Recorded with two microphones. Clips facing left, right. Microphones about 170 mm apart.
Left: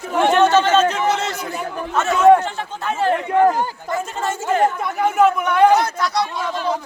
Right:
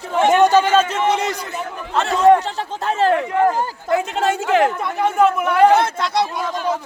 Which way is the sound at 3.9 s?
75° right (ahead or behind).